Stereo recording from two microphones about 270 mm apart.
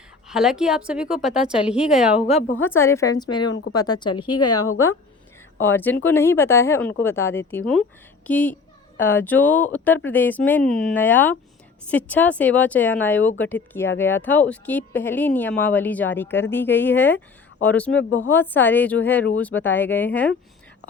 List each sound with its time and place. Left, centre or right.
0.3 s speech: centre
2.2 s a woman's voice: left
2.6 s speech: centre
3.5 s a woman's voice: left
3.8 s speech: centre
4.4 s a woman's voice: left
5.5 s speech: centre